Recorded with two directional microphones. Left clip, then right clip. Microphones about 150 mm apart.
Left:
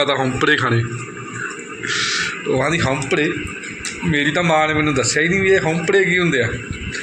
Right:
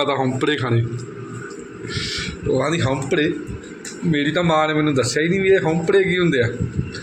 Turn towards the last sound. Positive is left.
turn(degrees=-15)  # may be behind; listen again after turning